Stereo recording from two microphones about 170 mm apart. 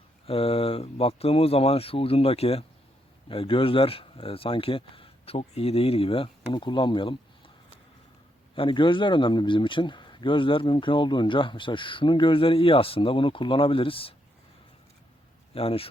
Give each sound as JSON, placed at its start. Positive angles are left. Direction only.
{"t": 0.3, "sound": "speech", "side_deg": 35}
{"t": 8.5, "sound": "speech", "side_deg": 30}
{"t": 15.5, "sound": "speech", "side_deg": 35}